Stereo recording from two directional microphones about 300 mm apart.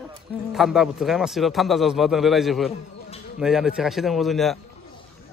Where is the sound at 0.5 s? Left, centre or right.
Centre.